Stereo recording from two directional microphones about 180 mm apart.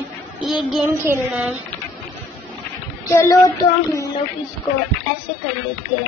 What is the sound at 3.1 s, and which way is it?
Child singing, 15° left (ahead or behind).